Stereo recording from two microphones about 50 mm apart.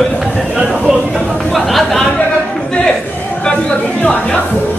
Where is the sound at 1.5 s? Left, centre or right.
Centre.